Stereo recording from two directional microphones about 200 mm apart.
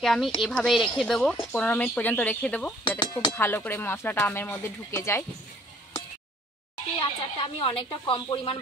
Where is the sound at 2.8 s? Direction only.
20° left (ahead or behind).